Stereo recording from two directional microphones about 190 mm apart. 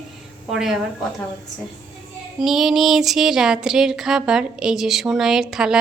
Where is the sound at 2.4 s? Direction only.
Centre (ahead or behind).